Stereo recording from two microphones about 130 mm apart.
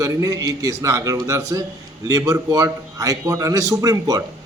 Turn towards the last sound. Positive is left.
turn(degrees=-30)  # may be behind; listen again after turning